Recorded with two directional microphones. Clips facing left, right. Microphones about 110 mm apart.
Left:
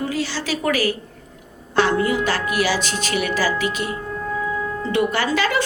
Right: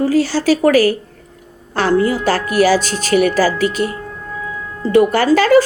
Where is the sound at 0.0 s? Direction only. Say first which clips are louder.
Right 10 dB; 40° right (ahead or behind).